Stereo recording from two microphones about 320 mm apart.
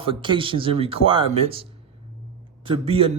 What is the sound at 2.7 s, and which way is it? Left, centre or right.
Speech, centre.